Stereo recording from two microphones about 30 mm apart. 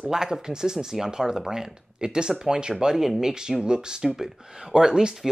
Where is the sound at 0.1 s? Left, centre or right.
Right.